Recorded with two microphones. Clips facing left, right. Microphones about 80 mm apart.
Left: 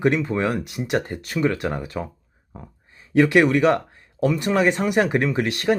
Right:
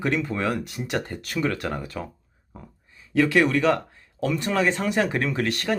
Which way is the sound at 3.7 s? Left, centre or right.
Left.